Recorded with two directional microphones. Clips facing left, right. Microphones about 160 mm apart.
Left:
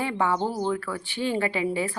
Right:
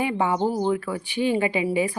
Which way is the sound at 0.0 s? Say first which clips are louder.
Right 3 dB; 15° right (ahead or behind).